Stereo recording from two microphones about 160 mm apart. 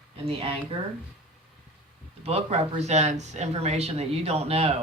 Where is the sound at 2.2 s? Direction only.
40° right (ahead or behind).